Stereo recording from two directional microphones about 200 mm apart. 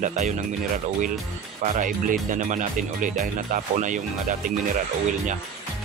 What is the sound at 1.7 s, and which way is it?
Speech, 40° right (ahead or behind).